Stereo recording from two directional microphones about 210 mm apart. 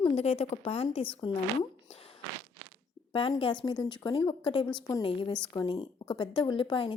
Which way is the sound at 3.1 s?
25° left (ahead or behind).